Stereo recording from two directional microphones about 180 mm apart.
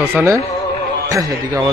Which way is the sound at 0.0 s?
15° right (ahead or behind).